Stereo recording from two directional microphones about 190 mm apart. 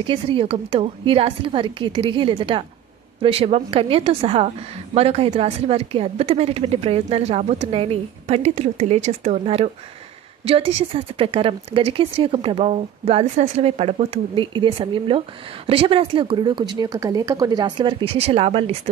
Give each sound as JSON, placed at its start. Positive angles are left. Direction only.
{"t": 0.0, "sound": "a woman's voice", "side_deg": -25}